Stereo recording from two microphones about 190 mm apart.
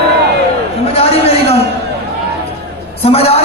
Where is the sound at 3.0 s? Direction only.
30° left (ahead or behind).